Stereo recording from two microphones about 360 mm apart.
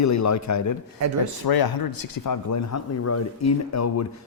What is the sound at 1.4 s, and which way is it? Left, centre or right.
Speech, left.